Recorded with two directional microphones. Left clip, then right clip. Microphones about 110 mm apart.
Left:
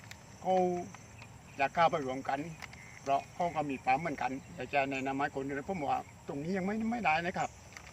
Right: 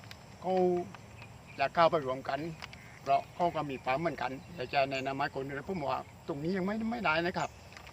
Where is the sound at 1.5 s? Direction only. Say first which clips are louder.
Right 2 dB; 15° right (ahead or behind).